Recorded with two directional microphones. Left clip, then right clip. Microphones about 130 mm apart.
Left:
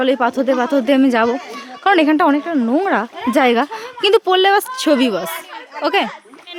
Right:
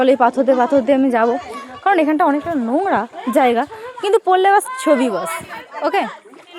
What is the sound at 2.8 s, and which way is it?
Speech, 20° left (ahead or behind).